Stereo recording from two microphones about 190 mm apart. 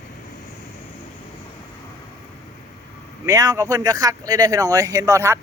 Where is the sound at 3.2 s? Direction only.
15° right (ahead or behind).